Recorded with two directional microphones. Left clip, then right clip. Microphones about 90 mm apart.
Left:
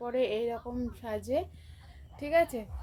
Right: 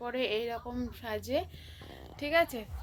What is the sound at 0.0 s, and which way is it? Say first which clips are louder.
A woman's voice: left 2 dB; 40° left (ahead or behind).